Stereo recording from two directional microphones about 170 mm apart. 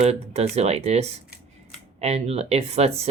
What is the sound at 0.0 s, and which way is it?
Speech, 40° right (ahead or behind).